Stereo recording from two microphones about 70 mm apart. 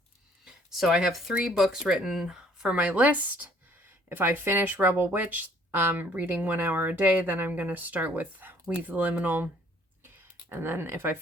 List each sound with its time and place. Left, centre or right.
0.4 s speech: centre
2.7 s speech: right
10.5 s speech: right